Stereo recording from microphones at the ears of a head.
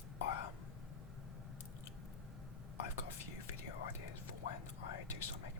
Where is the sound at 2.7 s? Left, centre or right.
Left.